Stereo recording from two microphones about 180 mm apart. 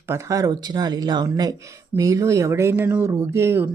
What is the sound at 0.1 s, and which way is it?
Speech, 20° right (ahead or behind).